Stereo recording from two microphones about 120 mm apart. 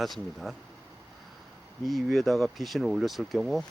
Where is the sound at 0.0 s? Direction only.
Centre (ahead or behind).